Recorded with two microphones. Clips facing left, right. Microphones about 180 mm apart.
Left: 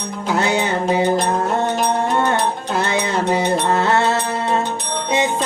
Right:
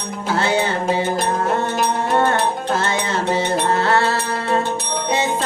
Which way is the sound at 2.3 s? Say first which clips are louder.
Even; 15° left (ahead or behind).